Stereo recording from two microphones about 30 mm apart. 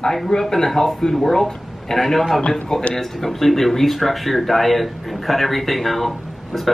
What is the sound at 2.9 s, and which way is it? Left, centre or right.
Speech, centre.